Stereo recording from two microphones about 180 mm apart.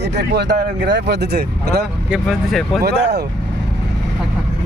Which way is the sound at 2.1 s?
Centre (ahead or behind).